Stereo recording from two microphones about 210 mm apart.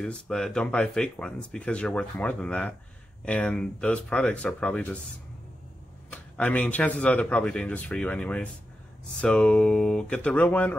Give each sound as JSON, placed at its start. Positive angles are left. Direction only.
{"t": 0.0, "sound": "speech", "side_deg": 5}
{"t": 6.0, "sound": "speech", "side_deg": 5}